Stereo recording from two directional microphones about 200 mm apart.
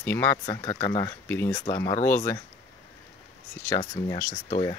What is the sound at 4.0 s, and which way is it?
Speech, 20° left (ahead or behind).